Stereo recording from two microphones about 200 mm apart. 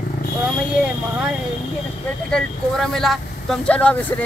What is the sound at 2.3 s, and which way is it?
Speech, 5° left (ahead or behind).